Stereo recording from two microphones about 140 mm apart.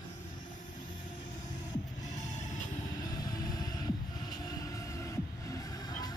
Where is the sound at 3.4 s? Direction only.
25° left (ahead or behind).